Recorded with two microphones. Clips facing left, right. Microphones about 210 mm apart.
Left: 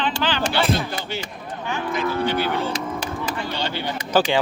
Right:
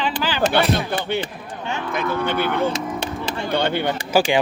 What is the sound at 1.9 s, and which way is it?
Speech, 55° right (ahead or behind).